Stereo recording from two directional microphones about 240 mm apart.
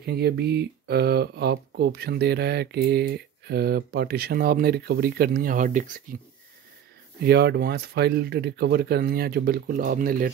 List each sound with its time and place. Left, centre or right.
0.0 s speech: right
7.2 s speech: right